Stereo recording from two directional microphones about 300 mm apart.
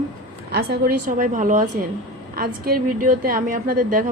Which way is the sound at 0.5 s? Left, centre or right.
Right.